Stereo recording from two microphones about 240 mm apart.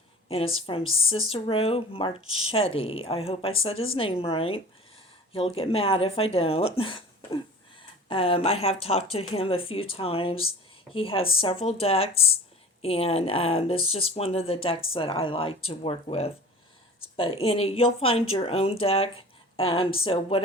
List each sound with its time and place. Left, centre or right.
0.3 s speech: left
0.9 s speech: left
1.1 s speech: left